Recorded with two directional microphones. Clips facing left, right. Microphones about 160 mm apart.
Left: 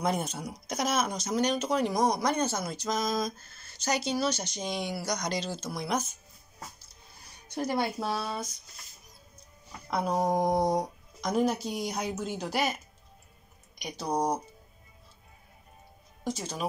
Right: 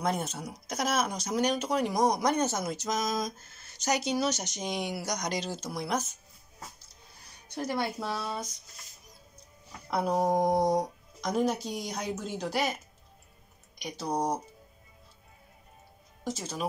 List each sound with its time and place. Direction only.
0.0 s speech: centre (ahead or behind)
7.5 s speech: 15° left (ahead or behind)
9.8 s speech: 5° right (ahead or behind)
16.3 s speech: centre (ahead or behind)